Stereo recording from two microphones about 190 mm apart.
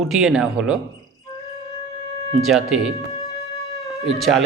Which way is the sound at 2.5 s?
Centre (ahead or behind).